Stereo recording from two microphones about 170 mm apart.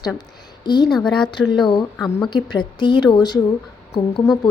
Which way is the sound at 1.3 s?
25° left (ahead or behind).